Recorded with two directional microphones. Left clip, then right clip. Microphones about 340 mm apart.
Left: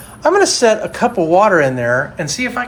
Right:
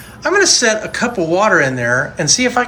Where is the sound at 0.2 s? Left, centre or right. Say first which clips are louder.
Left 1 dB; centre.